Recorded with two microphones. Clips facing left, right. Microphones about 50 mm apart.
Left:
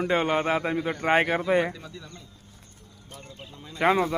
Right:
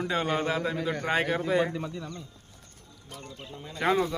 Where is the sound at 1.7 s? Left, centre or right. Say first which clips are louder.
Right 7 dB; right.